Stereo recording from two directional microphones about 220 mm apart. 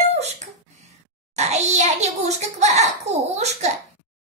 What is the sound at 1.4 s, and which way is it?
A child's voice, 30° right (ahead or behind).